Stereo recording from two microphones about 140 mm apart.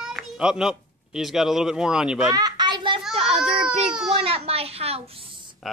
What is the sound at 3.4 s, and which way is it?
Baby cry, 5° right (ahead or behind).